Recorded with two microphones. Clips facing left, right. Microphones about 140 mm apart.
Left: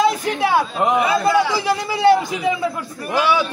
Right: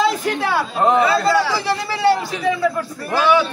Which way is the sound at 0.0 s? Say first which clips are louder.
Left 1 dB; 15° left (ahead or behind).